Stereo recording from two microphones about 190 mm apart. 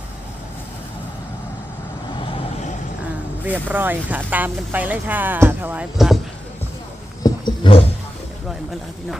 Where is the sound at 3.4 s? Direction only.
10° right (ahead or behind).